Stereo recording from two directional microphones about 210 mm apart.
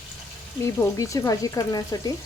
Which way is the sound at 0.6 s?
15° left (ahead or behind).